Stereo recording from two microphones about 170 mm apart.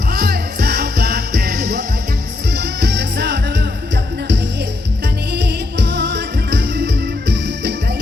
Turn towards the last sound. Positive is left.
turn(degrees=-90)